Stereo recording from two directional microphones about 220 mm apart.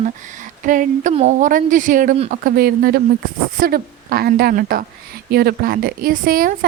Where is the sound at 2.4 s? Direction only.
45° right (ahead or behind).